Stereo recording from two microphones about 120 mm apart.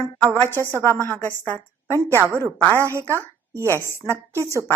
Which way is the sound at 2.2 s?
20° right (ahead or behind).